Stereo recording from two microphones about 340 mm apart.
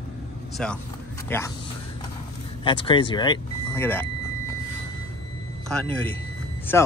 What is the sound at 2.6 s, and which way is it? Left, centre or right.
Speech, centre.